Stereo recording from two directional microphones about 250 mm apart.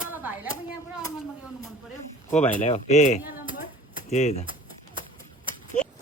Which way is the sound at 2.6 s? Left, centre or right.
Left.